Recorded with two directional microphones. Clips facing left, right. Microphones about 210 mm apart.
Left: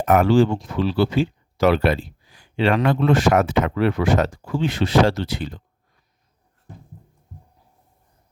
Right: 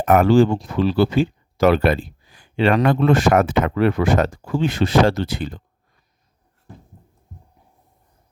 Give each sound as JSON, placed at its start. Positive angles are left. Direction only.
{"t": 0.0, "sound": "speech", "side_deg": -55}